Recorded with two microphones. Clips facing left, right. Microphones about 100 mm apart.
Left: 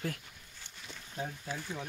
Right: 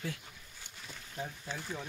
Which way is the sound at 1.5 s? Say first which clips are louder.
Left 1 dB; 10° left (ahead or behind).